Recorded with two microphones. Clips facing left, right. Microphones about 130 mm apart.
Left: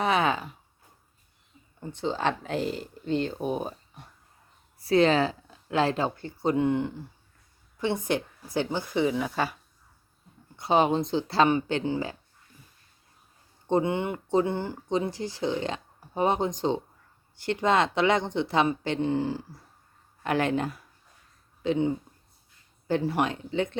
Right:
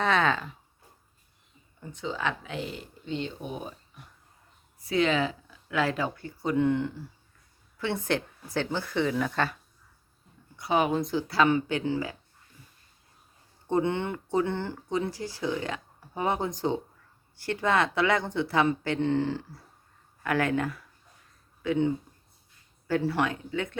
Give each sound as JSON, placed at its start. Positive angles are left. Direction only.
{"t": 0.0, "sound": "a sound", "side_deg": 10}
{"t": 1.8, "sound": "speech", "side_deg": 30}
{"t": 6.6, "sound": "a woman's voice", "side_deg": 15}
{"t": 10.6, "sound": "speech", "side_deg": 25}
{"t": 13.7, "sound": "speech", "side_deg": 20}
{"t": 20.2, "sound": "speech", "side_deg": 25}